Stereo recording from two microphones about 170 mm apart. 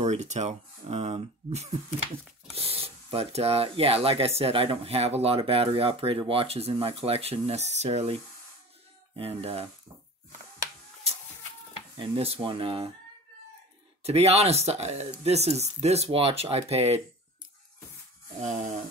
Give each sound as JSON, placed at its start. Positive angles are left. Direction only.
{"t": 0.0, "sound": "speech", "side_deg": -40}
{"t": 12.0, "sound": "speech", "side_deg": -35}
{"t": 14.0, "sound": "speech", "side_deg": -40}
{"t": 18.4, "sound": "speech", "side_deg": -45}